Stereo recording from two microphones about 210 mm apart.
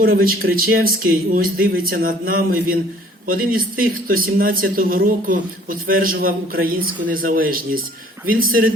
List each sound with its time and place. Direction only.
0.0 s speech: 45° right (ahead or behind)